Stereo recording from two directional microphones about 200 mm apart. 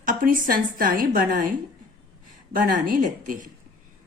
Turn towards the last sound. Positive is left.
turn(degrees=-45)  # may be behind; listen again after turning